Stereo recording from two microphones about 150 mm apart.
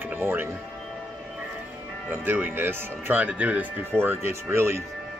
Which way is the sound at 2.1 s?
15° right (ahead or behind).